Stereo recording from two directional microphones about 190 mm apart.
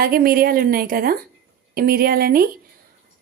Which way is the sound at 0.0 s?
50° right (ahead or behind).